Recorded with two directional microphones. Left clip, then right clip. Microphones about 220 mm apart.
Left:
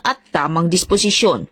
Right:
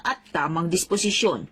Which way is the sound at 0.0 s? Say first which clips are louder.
Left 7 dB; 40° left (ahead or behind).